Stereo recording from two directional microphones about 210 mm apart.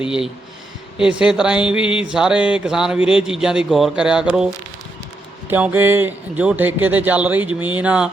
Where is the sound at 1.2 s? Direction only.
5° right (ahead or behind).